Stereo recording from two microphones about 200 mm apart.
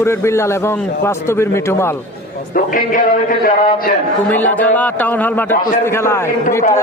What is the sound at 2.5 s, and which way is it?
A man's voice, 45° left (ahead or behind).